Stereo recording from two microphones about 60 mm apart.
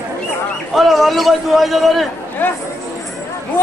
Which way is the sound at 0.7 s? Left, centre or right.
Centre.